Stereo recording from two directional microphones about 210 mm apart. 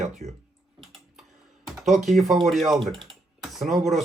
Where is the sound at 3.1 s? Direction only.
Centre (ahead or behind).